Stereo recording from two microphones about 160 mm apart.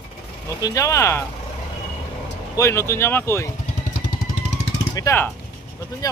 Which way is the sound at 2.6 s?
15° left (ahead or behind).